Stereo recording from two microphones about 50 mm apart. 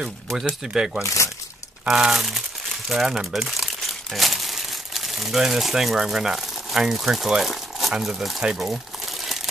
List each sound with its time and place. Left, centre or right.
0.5 s speech: centre
1.0 s speech: left
1.9 s speech: centre
3.4 s crumpling: centre
8.0 s speech: centre